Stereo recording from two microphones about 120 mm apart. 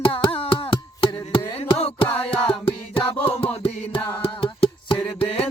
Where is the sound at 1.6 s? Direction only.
60° left (ahead or behind).